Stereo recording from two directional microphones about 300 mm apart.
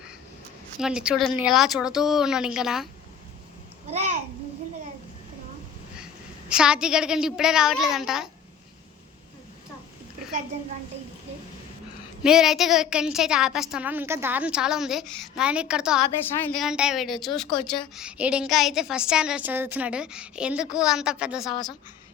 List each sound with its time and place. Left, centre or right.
0.8 s a woman's voice: centre
3.8 s babbling: right
6.5 s a woman's voice: centre
12.2 s a woman's voice: centre
21.5 s a woman's voice: centre